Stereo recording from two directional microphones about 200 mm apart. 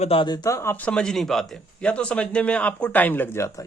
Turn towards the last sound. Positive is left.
turn(degrees=15)  # may be behind; listen again after turning